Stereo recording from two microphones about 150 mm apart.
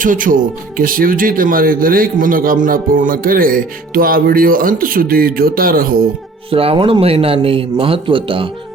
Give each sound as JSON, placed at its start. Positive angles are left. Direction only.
{"t": 0.0, "sound": "speech", "side_deg": -65}
{"t": 6.5, "sound": "speech", "side_deg": -40}